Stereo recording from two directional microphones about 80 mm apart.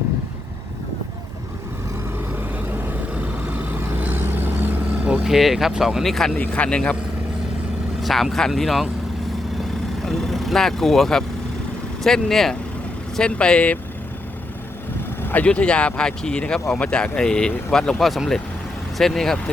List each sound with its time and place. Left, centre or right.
2.7 s vehicle: right; by 6.3 s centre
6.3 s speech: centre
8.0 s speech: centre
10.0 s speech: centre
15.2 s speech: left; by 19.4 s centre